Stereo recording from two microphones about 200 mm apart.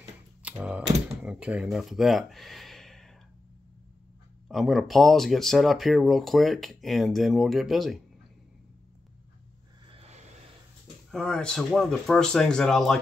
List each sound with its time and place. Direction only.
0.4 s speech: 5° right (ahead or behind)
4.5 s speech: centre (ahead or behind)
9.8 s a sound: 30° right (ahead or behind)
11.1 s speech: centre (ahead or behind)